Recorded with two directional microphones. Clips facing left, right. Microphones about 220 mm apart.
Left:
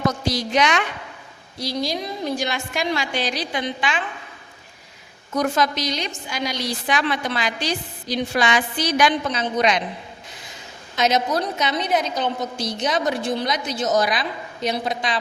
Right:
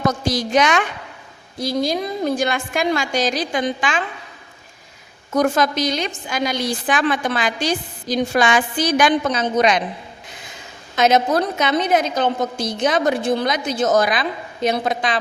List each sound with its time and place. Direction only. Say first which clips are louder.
0.3 s a woman's voice: right 5 dB; 45° right (ahead or behind)
5.3 s a woman's voice: right 4 dB; 50° right (ahead or behind)
10.9 s a woman's voice: right 4 dB; 55° right (ahead or behind)